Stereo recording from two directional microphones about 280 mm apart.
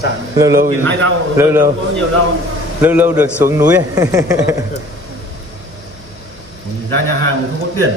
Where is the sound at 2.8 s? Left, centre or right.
Centre.